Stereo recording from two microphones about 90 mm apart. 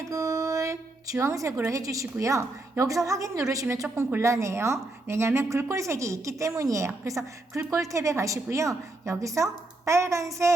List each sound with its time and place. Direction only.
0.0 s music: 35° right (ahead or behind)
1.2 s a woman's voice: 35° right (ahead or behind)